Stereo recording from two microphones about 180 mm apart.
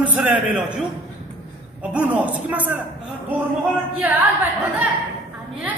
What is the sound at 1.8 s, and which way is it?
A man's voice, 5° right (ahead or behind).